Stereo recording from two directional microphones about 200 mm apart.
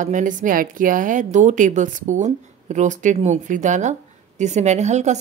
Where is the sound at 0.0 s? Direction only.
40° right (ahead or behind).